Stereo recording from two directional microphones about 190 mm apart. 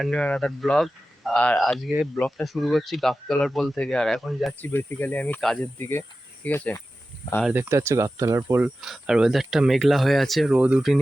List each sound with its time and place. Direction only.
0.0 s speech: 5° left (ahead or behind)
4.7 s speech: 10° left (ahead or behind)
7.4 s speech: 10° right (ahead or behind)